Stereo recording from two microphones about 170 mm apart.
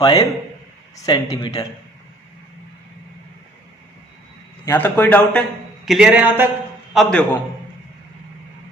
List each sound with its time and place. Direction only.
0.0 s speech: 25° left (ahead or behind)
4.6 s a man's voice: 15° left (ahead or behind)
5.8 s speech: 5° right (ahead or behind)
6.9 s speech: 5° left (ahead or behind)